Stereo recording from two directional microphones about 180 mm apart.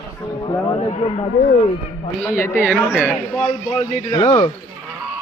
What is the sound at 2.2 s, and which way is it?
Speech, 15° left (ahead or behind).